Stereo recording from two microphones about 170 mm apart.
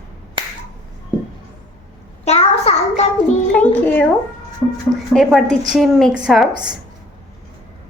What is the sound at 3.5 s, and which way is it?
Speech, 10° left (ahead or behind).